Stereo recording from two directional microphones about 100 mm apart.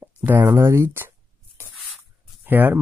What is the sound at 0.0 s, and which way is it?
Speech, 20° right (ahead or behind).